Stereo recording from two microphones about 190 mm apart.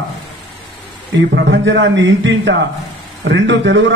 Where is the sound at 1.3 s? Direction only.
70° right (ahead or behind).